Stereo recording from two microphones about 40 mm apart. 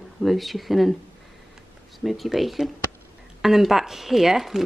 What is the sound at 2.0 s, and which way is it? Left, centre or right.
Speech, centre.